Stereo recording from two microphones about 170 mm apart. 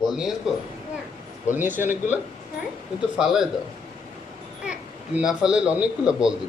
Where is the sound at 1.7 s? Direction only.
50° left (ahead or behind).